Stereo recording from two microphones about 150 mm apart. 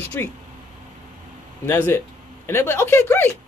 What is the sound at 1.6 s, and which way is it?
Speech, 15° left (ahead or behind).